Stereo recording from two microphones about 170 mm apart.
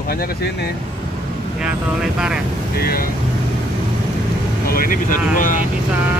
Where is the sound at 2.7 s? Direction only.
60° left (ahead or behind).